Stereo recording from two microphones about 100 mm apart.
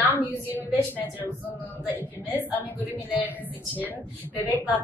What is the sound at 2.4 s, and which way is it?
Speech, 15° right (ahead or behind).